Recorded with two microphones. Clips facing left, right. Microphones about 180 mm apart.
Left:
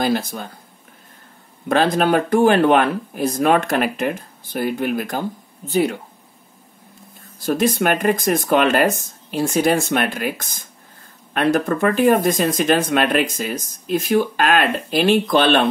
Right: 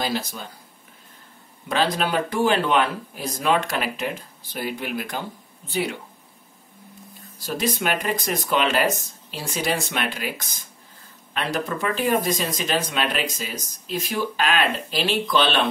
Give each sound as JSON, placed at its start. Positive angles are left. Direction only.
{"t": 0.0, "sound": "speech", "side_deg": 55}
{"t": 1.7, "sound": "speech", "side_deg": 50}
{"t": 7.3, "sound": "speech", "side_deg": 55}